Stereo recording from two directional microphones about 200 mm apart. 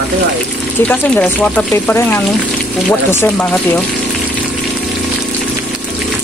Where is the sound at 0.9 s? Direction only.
5° left (ahead or behind).